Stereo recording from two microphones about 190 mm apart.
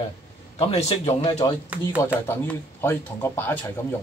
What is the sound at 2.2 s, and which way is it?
Speech, 10° left (ahead or behind).